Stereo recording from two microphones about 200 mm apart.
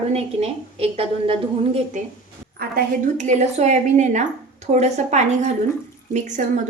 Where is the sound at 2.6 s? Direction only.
45° right (ahead or behind).